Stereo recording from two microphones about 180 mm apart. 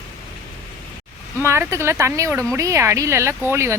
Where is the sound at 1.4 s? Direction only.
15° right (ahead or behind).